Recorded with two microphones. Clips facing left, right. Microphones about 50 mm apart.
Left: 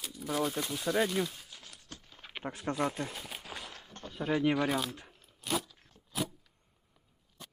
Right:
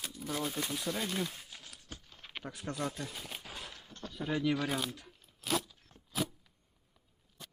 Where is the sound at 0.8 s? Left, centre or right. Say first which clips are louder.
Left 10 dB; left.